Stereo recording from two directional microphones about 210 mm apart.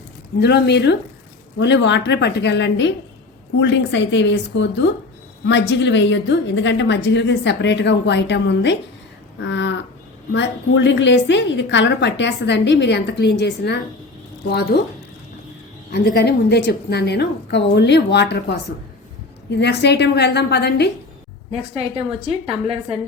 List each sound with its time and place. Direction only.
0.3 s a woman's voice: 50° left (ahead or behind)
9.4 s livestock: 60° left (ahead or behind)
10.3 s a woman's voice: 60° left (ahead or behind)
16.1 s a woman's voice: 50° left (ahead or behind)
21.8 s a woman's voice: 30° right (ahead or behind)